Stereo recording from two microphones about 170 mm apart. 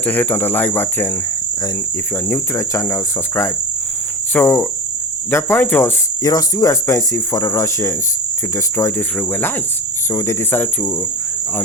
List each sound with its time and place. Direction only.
0.0 s speech: 10° left (ahead or behind)
2.3 s speech: 15° left (ahead or behind)